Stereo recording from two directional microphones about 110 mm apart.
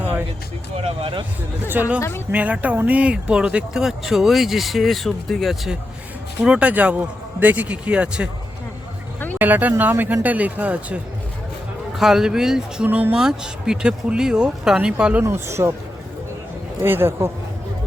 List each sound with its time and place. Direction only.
0.9 s speech: 55° right (ahead or behind)
2.0 s speech: 25° left (ahead or behind)
2.3 s speech: 15° right (ahead or behind)
6.4 s speech: 10° right (ahead or behind)
9.4 s speech: 15° right (ahead or behind)
11.9 s speech: 5° right (ahead or behind)
15.2 s speech: 25° right (ahead or behind)
16.8 s speech: 20° right (ahead or behind)